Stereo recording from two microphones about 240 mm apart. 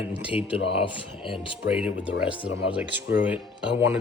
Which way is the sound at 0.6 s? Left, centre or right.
Left.